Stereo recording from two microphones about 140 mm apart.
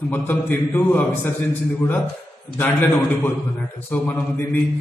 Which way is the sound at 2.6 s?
15° left (ahead or behind).